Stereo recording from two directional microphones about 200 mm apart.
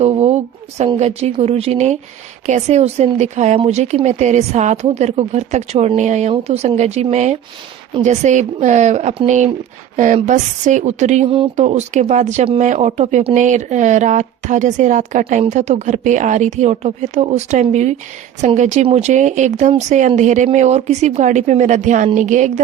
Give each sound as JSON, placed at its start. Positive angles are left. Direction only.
{"t": 0.0, "sound": "a woman's voice", "side_deg": -35}